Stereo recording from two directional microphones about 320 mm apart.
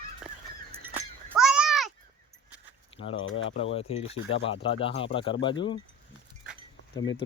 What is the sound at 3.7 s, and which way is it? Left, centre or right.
Speech, centre.